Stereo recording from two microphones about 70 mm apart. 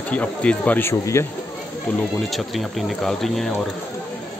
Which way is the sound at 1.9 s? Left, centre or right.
Left.